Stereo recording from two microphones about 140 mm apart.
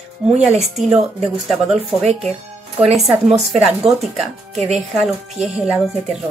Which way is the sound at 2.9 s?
Centre (ahead or behind).